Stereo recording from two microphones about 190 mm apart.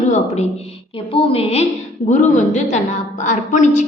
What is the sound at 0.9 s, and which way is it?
A woman's voice, 30° left (ahead or behind).